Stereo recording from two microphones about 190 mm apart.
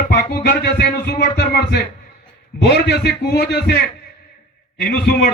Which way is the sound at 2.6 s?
60° left (ahead or behind).